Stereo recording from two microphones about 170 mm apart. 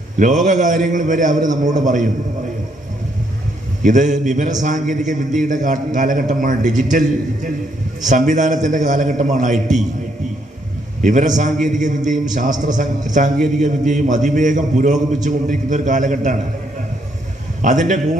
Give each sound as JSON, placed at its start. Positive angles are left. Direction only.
{"t": 0.2, "sound": "a man's voice", "side_deg": -45}
{"t": 3.8, "sound": "a man's voice", "side_deg": -50}
{"t": 11.0, "sound": "a man's voice", "side_deg": -50}
{"t": 17.6, "sound": "a man's voice", "side_deg": -45}